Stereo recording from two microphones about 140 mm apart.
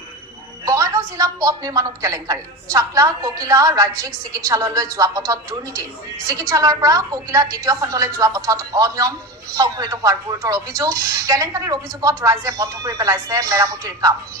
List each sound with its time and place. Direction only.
0.6 s a woman's voice: 25° right (ahead or behind)